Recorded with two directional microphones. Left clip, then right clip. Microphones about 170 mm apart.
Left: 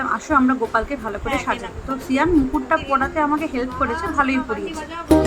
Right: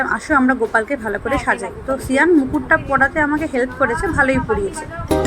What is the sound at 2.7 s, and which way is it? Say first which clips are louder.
A woman's voice: right 7 dB; 15° right (ahead or behind).